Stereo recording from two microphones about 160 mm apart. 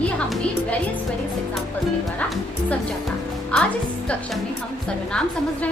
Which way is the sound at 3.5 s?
10° left (ahead or behind).